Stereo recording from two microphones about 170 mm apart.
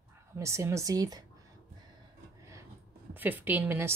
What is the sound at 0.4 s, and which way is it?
Speech, 15° right (ahead or behind).